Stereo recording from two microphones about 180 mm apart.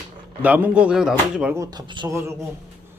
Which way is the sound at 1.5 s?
20° right (ahead or behind).